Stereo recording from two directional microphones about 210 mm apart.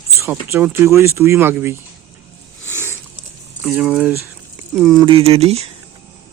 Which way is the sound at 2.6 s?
10° left (ahead or behind).